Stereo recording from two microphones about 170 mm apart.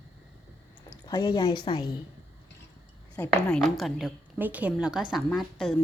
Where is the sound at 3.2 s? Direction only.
Centre (ahead or behind).